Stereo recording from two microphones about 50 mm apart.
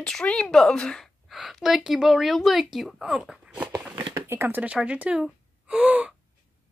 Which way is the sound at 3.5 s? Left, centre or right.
Right.